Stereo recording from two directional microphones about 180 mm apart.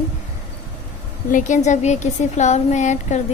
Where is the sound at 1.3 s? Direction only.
45° left (ahead or behind).